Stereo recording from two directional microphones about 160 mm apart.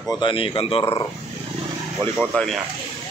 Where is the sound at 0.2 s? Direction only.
30° left (ahead or behind).